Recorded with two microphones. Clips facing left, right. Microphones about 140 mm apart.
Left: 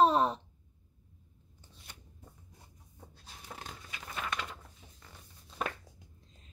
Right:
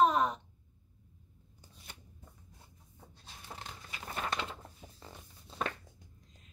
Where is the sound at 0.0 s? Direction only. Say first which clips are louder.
Left 2 dB; 30° left (ahead or behind).